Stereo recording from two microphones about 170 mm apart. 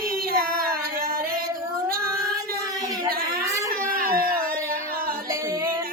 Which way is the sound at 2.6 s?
20° right (ahead or behind).